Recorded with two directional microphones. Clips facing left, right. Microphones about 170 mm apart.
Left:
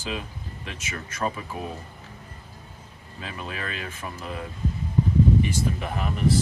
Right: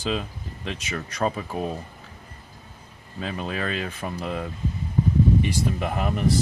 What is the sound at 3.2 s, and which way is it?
Speech, 35° right (ahead or behind).